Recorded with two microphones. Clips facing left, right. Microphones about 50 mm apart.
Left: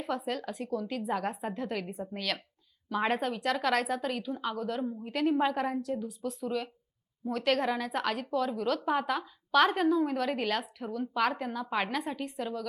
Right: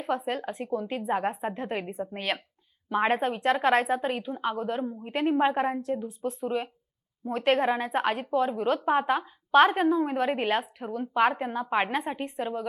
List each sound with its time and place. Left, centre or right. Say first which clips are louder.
0.0 s a woman's voice: right 4 dB; right